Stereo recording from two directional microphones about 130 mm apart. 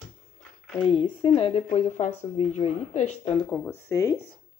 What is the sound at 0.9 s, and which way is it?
Speech, 40° left (ahead or behind).